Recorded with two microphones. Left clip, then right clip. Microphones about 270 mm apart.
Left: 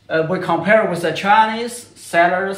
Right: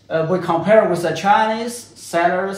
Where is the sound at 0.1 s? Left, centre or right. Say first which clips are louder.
Even; centre.